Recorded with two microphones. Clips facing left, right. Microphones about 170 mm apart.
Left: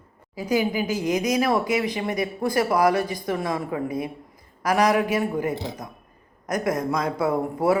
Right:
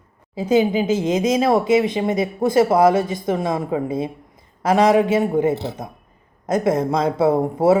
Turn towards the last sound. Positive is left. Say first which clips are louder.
# right 6 dB
turn(degrees=-25)  # may be behind; listen again after turning